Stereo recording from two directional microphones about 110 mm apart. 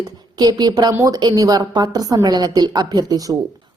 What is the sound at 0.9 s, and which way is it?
A woman's voice, 30° right (ahead or behind).